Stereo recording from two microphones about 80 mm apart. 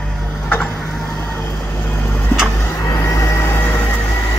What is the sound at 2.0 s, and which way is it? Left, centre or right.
Vehicle, left.